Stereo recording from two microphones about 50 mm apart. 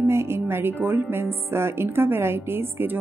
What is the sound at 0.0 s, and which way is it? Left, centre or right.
A woman's voice, right.